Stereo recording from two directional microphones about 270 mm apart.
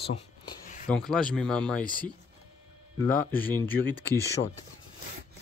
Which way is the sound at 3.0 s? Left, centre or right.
Centre.